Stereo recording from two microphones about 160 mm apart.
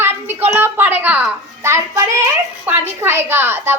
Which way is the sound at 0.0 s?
15° right (ahead or behind).